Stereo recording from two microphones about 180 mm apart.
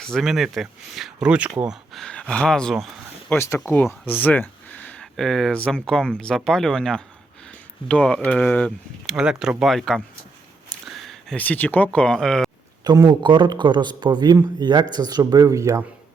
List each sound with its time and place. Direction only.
0.0 s speech: centre (ahead or behind)
3.3 s speech: 15° left (ahead or behind)
9.1 s speech: 5° right (ahead or behind)
12.8 s speech: 20° right (ahead or behind)